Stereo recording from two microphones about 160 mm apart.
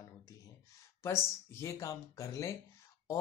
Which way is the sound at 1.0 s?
20° left (ahead or behind).